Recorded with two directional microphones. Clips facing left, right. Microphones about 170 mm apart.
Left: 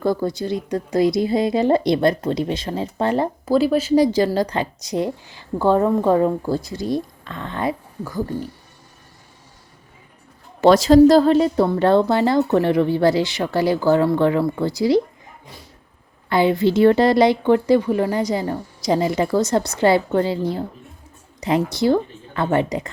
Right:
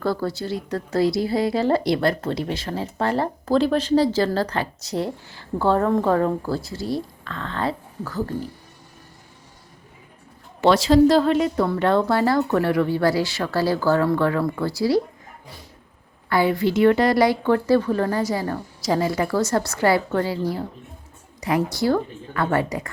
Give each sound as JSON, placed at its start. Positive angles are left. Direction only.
{"t": 0.0, "sound": "a woman's voice", "side_deg": 15}
{"t": 3.4, "sound": "a woman's voice", "side_deg": 5}
{"t": 10.6, "sound": "a woman's voice", "side_deg": 45}
{"t": 16.3, "sound": "a woman's voice", "side_deg": 25}